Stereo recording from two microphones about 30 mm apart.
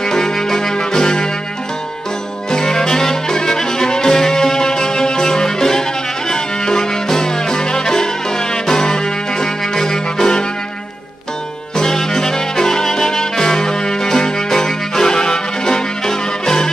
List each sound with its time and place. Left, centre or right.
0.0 s brass instrument: centre
2.5 s music: left
11.7 s trumpet: centre